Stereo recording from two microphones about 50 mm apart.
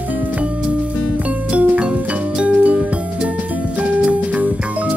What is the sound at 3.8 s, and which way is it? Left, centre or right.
Music, right.